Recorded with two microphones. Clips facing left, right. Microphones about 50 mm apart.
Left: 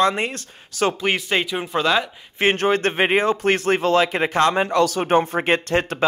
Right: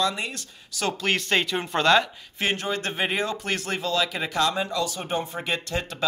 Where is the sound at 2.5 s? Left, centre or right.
Left.